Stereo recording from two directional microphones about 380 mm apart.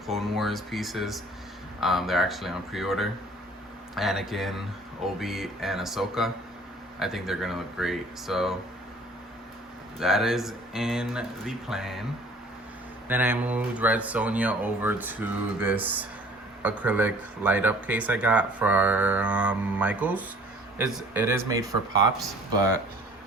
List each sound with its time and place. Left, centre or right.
0.1 s speech: centre
10.0 s speech: centre
13.1 s speech: centre